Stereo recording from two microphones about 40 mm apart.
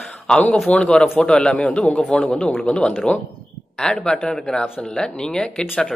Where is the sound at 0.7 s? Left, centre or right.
Left.